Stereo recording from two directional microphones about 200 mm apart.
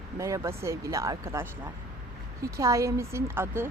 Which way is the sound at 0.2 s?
15° right (ahead or behind).